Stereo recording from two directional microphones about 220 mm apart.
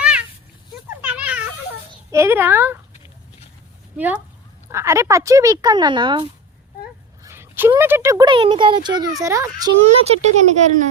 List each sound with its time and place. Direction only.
0.0 s a sound: 5° right (ahead or behind)
1.0 s children playing: 5° right (ahead or behind)
1.9 s a child's voice: 15° right (ahead or behind)
3.9 s speech: 5° right (ahead or behind)
9.8 s speech: 30° right (ahead or behind)